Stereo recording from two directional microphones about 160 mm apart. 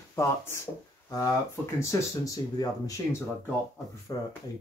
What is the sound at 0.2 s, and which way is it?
Speech, 20° left (ahead or behind).